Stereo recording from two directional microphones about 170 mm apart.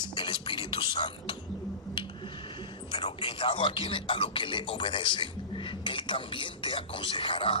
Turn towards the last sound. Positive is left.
turn(degrees=30)  # may be behind; listen again after turning